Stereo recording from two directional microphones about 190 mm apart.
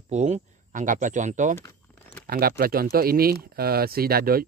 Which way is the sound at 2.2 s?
55° right (ahead or behind).